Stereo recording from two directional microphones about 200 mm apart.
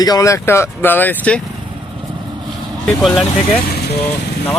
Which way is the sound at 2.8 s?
Centre (ahead or behind).